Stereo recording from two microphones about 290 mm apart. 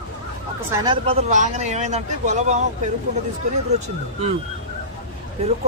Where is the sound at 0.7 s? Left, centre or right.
Centre.